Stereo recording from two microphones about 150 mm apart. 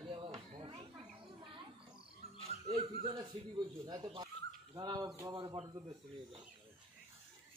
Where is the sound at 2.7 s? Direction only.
35° right (ahead or behind).